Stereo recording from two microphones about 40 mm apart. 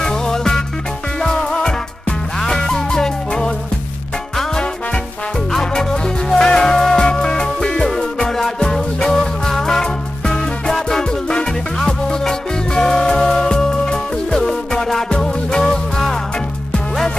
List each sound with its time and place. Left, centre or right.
0.0 s music: centre
5.5 s music: centre
7.0 s music: left